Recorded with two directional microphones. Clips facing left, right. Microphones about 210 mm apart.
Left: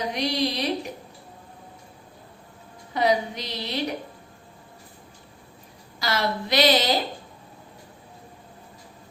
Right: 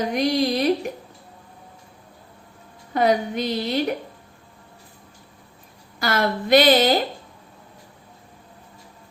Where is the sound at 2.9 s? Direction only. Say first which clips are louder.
Right 3 dB; 50° right (ahead or behind).